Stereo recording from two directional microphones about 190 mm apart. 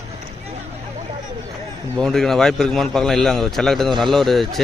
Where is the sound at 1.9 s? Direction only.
Centre (ahead or behind).